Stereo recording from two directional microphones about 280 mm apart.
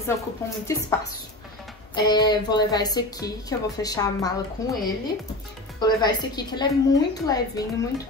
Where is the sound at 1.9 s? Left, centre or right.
Centre.